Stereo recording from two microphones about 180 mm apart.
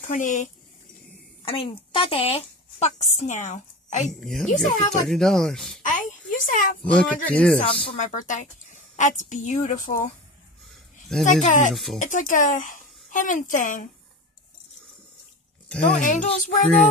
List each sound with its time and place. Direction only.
0.0 s a woman's voice: 45° left (ahead or behind)
1.4 s speech: 30° left (ahead or behind)
4.0 s speech: centre (ahead or behind)
5.8 s a child's voice: 45° left (ahead or behind)
6.9 s speech: 5° left (ahead or behind)
7.6 s a woman's voice: 40° left (ahead or behind)
11.4 s a woman's voice: 45° left (ahead or behind)
11.7 s speech: centre (ahead or behind)
12.0 s a woman's voice: 45° left (ahead or behind)
16.0 s a woman's voice: 45° left (ahead or behind)